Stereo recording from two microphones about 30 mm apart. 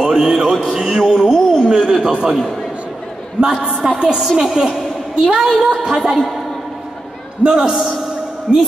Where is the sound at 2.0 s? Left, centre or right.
Right.